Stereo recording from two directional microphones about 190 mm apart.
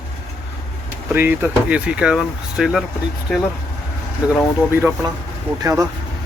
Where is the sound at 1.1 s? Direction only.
10° right (ahead or behind).